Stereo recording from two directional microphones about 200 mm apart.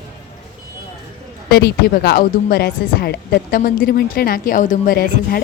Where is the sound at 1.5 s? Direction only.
50° left (ahead or behind).